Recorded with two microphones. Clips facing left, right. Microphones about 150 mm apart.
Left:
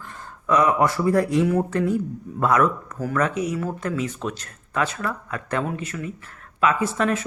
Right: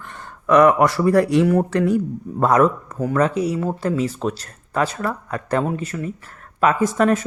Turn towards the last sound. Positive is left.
turn(degrees=-40)  # may be behind; listen again after turning